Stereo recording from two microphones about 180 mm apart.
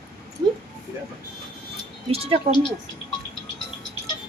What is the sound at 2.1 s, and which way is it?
Speech, 35° right (ahead or behind).